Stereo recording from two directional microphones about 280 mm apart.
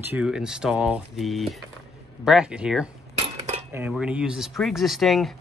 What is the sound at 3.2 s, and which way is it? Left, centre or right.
Cutlery, right.